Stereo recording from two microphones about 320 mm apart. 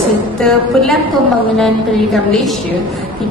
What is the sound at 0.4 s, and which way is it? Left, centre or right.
Speech, centre.